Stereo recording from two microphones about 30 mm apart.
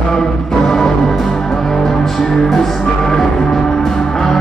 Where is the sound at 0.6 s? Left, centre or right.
Centre.